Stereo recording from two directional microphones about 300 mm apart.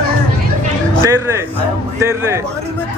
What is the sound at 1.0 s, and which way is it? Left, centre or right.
Speech, centre.